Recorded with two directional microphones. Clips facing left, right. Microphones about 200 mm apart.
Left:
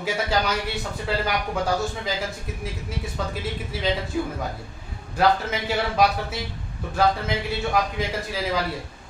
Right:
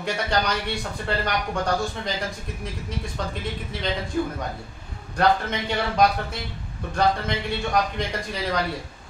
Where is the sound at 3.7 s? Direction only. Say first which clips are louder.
Left 4 dB; 5° left (ahead or behind).